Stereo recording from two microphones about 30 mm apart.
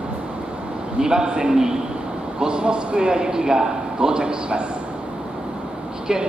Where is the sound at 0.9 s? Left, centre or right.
Right.